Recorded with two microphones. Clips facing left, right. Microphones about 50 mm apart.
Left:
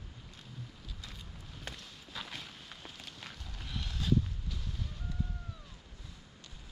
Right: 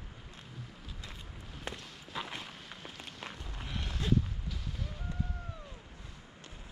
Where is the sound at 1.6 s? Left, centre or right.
Right.